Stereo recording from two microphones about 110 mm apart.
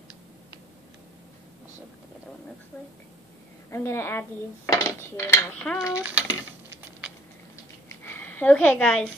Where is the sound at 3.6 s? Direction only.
25° left (ahead or behind).